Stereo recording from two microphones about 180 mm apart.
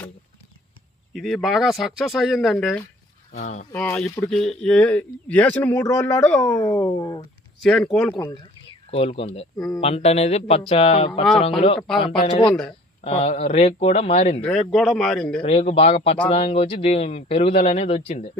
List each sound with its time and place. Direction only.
1.1 s speech: centre (ahead or behind)
3.3 s a man's voice: 40° left (ahead or behind)
3.8 s a man's voice: 5° left (ahead or behind)
6.6 s speech: 20° left (ahead or behind)
7.6 s speech: 5° left (ahead or behind)
8.9 s a man's voice: 30° left (ahead or behind)
9.6 s speech: 5° left (ahead or behind)
9.8 s a man's voice: 35° left (ahead or behind)
12.5 s speech: 5° left (ahead or behind)
13.1 s a man's voice: 35° left (ahead or behind)
14.4 s speech: 5° left (ahead or behind)
15.4 s a man's voice: 30° left (ahead or behind)